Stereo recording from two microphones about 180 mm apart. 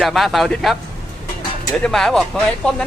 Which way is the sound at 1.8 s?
Centre (ahead or behind).